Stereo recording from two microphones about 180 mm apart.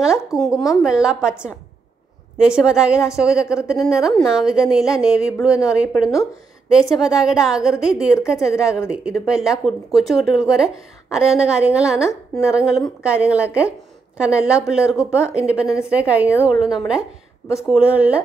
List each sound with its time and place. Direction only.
0.3 s speech: 15° left (ahead or behind)
0.8 s a woman's voice: 5° right (ahead or behind)
2.3 s a woman's voice: 5° right (ahead or behind)